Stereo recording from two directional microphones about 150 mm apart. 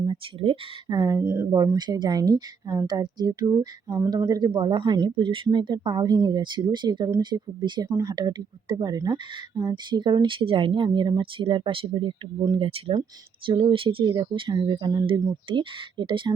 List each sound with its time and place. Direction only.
0.0 s speech: 35° right (ahead or behind)
0.9 s speech: 20° right (ahead or behind)